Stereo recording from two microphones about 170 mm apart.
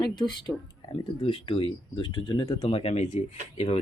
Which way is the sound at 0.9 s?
30° left (ahead or behind).